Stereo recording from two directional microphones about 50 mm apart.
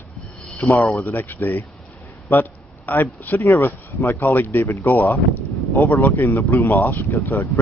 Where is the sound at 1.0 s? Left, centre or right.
Left.